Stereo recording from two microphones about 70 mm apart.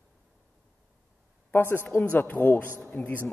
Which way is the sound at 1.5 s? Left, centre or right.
Left.